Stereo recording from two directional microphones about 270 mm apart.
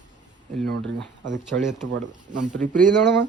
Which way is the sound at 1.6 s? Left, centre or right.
Centre.